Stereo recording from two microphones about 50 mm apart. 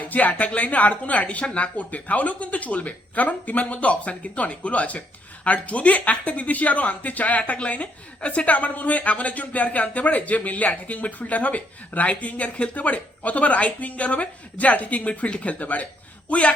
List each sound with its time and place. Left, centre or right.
0.0 s speech: left